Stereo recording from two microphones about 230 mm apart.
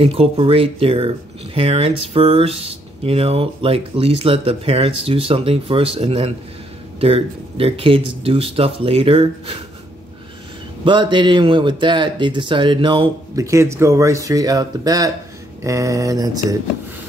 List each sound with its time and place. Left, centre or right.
0.0 s speech: right
10.8 s speech: centre